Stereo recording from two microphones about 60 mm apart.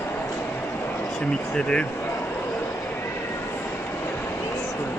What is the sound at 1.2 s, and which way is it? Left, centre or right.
Speech, centre.